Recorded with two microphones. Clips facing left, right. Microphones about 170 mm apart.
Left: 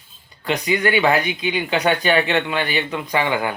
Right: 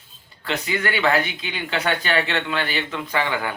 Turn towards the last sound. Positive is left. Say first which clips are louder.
# left 3 dB
turn(degrees=15)  # may be behind; listen again after turning